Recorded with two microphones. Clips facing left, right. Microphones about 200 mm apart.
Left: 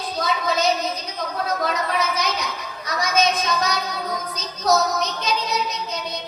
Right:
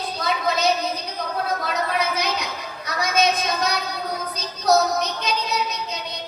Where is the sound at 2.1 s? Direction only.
60° right (ahead or behind).